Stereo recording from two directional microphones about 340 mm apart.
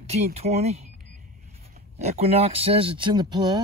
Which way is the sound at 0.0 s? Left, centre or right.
Centre.